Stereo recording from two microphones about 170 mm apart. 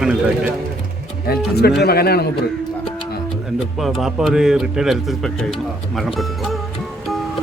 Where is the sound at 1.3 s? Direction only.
65° left (ahead or behind).